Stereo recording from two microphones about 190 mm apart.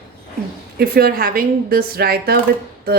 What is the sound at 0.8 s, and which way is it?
A woman's voice, 55° right (ahead or behind).